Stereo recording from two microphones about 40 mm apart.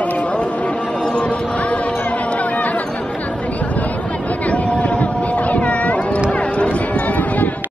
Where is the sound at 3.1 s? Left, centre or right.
Left.